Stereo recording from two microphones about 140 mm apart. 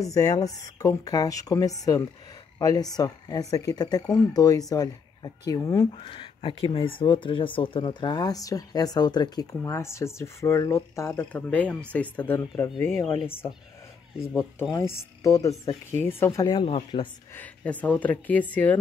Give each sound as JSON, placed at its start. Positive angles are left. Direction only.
{"t": 0.0, "sound": "speech", "side_deg": 25}
{"t": 5.9, "sound": "speech", "side_deg": 40}
{"t": 14.6, "sound": "speech", "side_deg": 25}
{"t": 16.4, "sound": "speech", "side_deg": 35}
{"t": 17.3, "sound": "speech", "side_deg": 10}